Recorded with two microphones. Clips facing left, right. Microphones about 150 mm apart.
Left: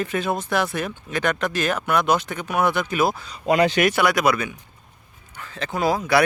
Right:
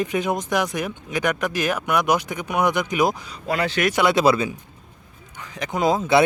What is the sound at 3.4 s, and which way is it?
Speech, 20° left (ahead or behind).